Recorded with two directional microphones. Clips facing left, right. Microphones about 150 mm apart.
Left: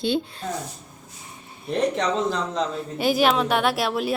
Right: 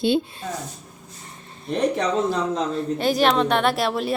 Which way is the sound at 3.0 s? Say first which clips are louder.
Even; 5° left (ahead or behind).